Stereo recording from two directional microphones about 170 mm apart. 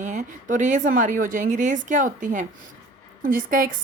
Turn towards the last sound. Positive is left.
turn(degrees=-55)  # may be behind; listen again after turning